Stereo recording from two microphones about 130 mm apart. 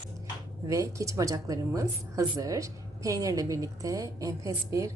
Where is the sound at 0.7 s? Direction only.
25° right (ahead or behind).